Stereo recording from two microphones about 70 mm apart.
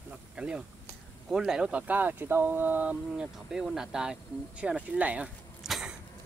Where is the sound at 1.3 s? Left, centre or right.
Centre; by 3.0 s right.